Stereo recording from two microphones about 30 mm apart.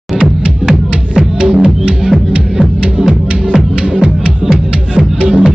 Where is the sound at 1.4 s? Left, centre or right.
Right.